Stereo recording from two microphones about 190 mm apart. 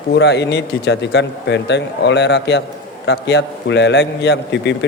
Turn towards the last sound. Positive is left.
turn(degrees=70)  # may be behind; listen again after turning